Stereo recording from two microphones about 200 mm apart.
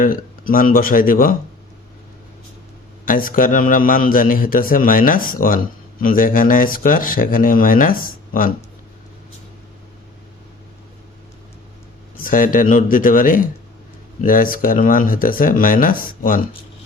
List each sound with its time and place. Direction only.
0.0 s a man's voice: 45° left (ahead or behind)
3.1 s a man's voice: 45° left (ahead or behind)
12.2 s a man's voice: 45° left (ahead or behind)